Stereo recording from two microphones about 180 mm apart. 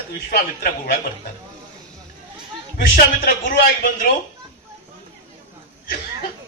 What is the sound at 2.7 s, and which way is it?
Speech, 55° left (ahead or behind).